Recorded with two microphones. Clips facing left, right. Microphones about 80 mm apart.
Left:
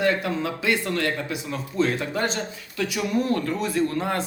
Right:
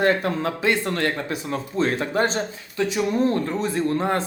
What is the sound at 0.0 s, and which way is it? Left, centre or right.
Speech, right.